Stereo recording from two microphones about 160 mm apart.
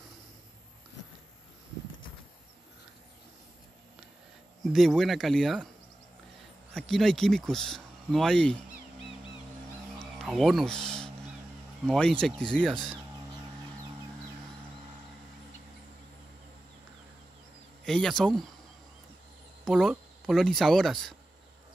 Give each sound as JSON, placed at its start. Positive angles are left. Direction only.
{"t": 4.7, "sound": "speech", "side_deg": 0}
{"t": 6.7, "sound": "speech", "side_deg": 0}
{"t": 9.9, "sound": "a sound", "side_deg": 0}
{"t": 11.8, "sound": "speech", "side_deg": 0}
{"t": 17.8, "sound": "speech", "side_deg": 5}
{"t": 19.6, "sound": "speech", "side_deg": 0}